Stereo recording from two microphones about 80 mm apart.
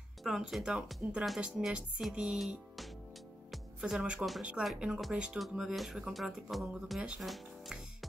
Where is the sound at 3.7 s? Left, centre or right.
Centre.